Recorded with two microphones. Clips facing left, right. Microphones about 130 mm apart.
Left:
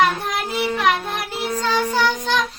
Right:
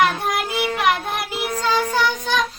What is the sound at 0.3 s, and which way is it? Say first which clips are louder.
Child singing: even; 10° right (ahead or behind).